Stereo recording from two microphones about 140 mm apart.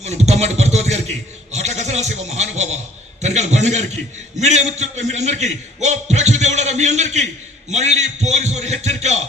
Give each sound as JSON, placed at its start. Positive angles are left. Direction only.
{"t": 0.0, "sound": "a man's voice", "side_deg": -50}